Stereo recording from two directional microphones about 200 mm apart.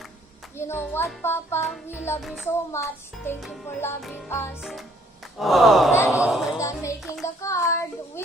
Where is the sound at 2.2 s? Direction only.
Centre (ahead or behind).